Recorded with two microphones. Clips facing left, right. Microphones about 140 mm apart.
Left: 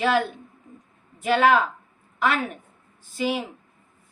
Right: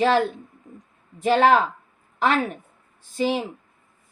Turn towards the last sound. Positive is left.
turn(degrees=-35)  # may be behind; listen again after turning